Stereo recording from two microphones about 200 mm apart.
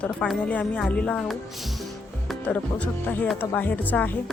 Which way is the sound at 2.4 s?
5° left (ahead or behind).